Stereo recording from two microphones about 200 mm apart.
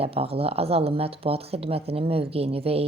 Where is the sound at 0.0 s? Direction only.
30° right (ahead or behind).